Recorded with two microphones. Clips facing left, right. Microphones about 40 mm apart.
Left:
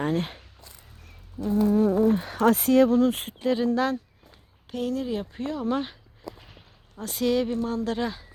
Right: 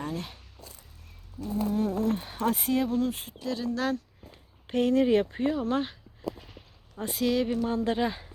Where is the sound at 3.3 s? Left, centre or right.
Left.